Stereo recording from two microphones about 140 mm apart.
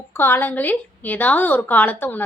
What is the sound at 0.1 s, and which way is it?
A woman's voice, 15° left (ahead or behind).